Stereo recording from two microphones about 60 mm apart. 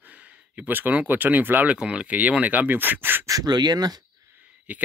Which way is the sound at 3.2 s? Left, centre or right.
Right.